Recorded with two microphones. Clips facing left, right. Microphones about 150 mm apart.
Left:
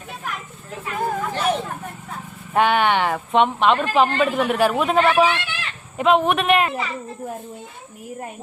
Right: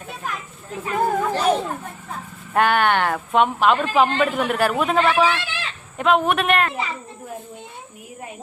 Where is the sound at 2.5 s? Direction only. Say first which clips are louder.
Even; centre (ahead or behind).